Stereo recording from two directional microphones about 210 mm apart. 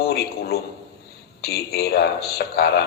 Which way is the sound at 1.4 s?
50° left (ahead or behind).